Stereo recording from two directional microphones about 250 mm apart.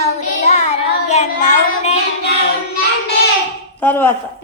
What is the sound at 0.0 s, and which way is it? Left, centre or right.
Child singing, left.